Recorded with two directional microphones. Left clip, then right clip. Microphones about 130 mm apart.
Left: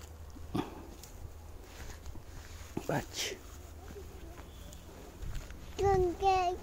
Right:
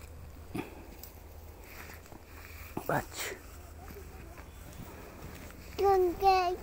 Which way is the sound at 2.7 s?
40° left (ahead or behind).